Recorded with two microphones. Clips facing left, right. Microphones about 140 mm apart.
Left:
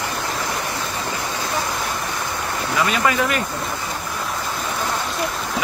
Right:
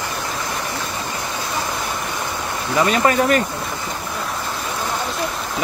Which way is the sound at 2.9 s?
40° right (ahead or behind).